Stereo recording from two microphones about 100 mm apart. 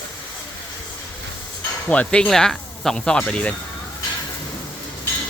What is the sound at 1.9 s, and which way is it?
Speech, 15° left (ahead or behind).